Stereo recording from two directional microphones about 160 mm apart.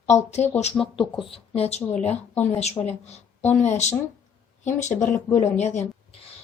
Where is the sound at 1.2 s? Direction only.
35° left (ahead or behind).